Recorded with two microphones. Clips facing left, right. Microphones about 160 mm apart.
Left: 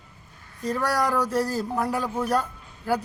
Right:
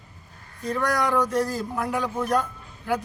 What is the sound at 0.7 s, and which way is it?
A man's voice, 10° left (ahead or behind).